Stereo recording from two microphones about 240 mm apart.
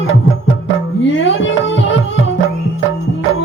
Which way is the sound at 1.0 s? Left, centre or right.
Left.